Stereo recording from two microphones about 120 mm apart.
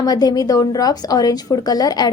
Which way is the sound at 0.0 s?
30° left (ahead or behind).